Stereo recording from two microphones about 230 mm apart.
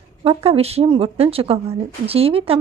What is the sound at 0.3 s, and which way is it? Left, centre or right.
A woman's voice, right.